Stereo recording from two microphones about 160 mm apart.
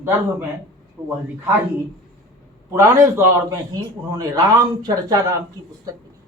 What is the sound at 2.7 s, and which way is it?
A man's voice, 20° right (ahead or behind).